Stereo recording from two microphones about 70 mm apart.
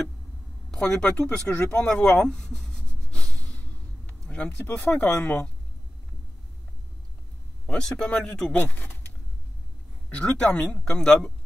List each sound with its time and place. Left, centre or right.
0.7 s speech: centre
2.0 s a sound: centre
4.7 s speech: centre
7.6 s speech: centre
8.7 s a sound: left
10.0 s speech: centre